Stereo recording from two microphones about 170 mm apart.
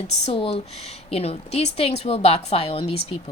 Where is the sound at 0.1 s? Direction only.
40° left (ahead or behind).